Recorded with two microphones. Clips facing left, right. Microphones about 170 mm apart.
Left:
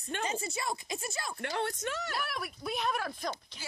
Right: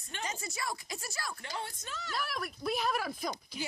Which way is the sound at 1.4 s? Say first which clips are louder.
Left 8 dB; 65° left (ahead or behind).